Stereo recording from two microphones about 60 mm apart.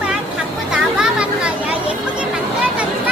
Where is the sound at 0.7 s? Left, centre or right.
Centre.